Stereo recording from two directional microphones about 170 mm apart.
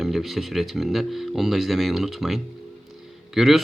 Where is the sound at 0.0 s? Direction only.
Centre (ahead or behind).